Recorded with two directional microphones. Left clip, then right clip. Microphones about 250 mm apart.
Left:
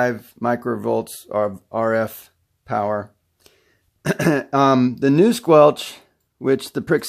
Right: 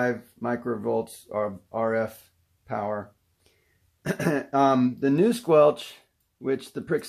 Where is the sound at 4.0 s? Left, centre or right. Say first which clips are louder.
Left 7 dB; left.